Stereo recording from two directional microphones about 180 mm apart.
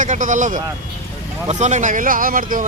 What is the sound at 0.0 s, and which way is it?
Speech, 45° right (ahead or behind).